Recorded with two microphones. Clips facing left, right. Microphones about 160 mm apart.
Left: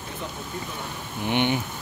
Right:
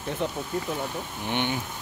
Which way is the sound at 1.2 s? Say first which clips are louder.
Left 5 dB; 15° left (ahead or behind).